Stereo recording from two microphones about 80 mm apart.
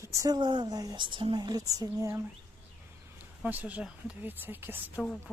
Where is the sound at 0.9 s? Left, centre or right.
Right.